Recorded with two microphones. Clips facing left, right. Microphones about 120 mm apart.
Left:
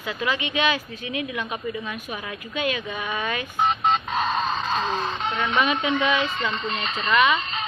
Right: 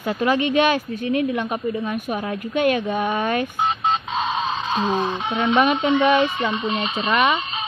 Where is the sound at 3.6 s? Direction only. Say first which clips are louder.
Even; centre (ahead or behind).